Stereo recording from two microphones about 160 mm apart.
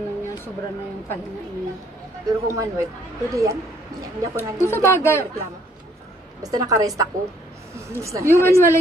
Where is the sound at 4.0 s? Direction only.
20° right (ahead or behind).